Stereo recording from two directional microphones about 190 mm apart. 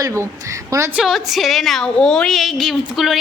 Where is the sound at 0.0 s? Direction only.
15° right (ahead or behind).